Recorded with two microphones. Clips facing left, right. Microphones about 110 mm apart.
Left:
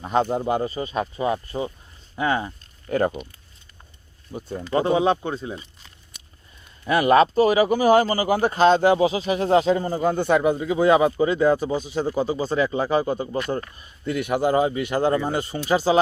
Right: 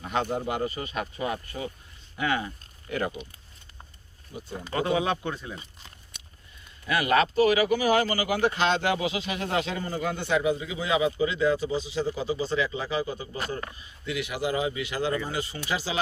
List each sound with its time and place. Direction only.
0.0 s speech: 35° left (ahead or behind)
2.9 s speech: 45° left (ahead or behind)
4.3 s speech: 45° left (ahead or behind)
4.7 s speech: 30° left (ahead or behind)
6.8 s speech: 40° left (ahead or behind)